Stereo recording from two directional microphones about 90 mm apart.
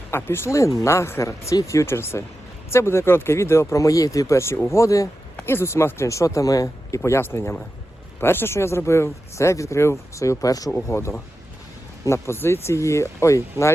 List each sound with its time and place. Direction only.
0.1 s speech: 25° left (ahead or behind)
5.4 s speech: 25° left (ahead or behind); by 10.7 s 40° left (ahead or behind)
10.8 s speech: 30° left (ahead or behind)